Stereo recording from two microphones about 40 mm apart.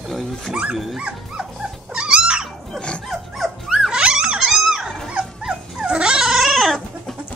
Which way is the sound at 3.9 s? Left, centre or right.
Centre.